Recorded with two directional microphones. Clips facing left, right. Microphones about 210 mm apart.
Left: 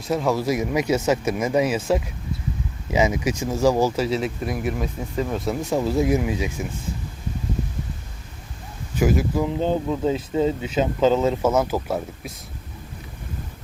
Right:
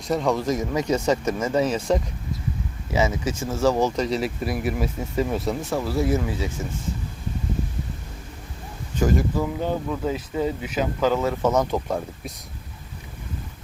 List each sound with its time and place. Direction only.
0.0 s speech: centre (ahead or behind)
5.7 s speech: 20° left (ahead or behind)
9.0 s speech: 10° left (ahead or behind)
9.5 s speech: 20° left (ahead or behind)
11.4 s speech: 5° left (ahead or behind)